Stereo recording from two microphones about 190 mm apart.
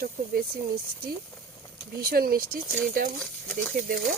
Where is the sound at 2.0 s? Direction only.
50° right (ahead or behind).